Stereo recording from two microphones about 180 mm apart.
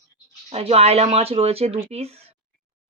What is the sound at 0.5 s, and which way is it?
Speech, 35° right (ahead or behind).